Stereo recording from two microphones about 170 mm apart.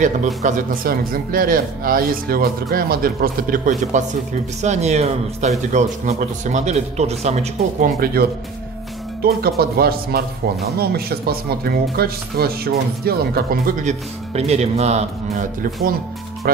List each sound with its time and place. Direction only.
0.4 s speech: 50° right (ahead or behind)
4.6 s speech: 40° right (ahead or behind)
8.0 s speech: 65° right (ahead or behind)
13.8 s speech: 40° right (ahead or behind)